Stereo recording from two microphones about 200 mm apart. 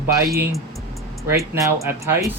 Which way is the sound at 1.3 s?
10° right (ahead or behind).